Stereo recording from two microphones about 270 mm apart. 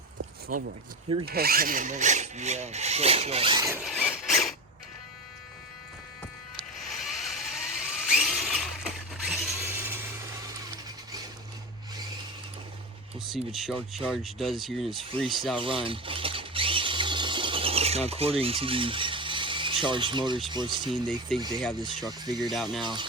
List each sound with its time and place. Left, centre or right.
0.5 s wood: right
3.8 s squeal: centre
6.7 s a sound: centre
13.1 s speech: centre
15.6 s a sound: centre
20.5 s speech: centre
21.3 s speech: centre